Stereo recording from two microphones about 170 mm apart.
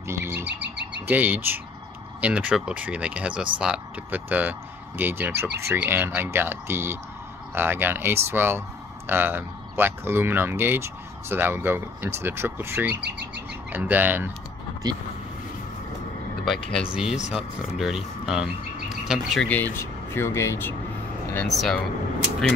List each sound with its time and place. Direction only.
0.0 s bird: 15° right (ahead or behind)
0.5 s bird: 90° right
1.0 s speech: 10° right (ahead or behind)
12.9 s speech: 90° right
13.7 s speech: 10° right (ahead or behind)
16.9 s speech: 5° right (ahead or behind)
19.5 s speech: 10° left (ahead or behind)
21.5 s speech: centre (ahead or behind)